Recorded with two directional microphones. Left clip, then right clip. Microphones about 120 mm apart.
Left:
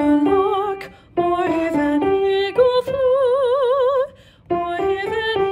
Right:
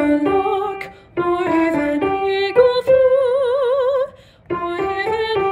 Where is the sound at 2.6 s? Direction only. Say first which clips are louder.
Right 5 dB; 40° left (ahead or behind).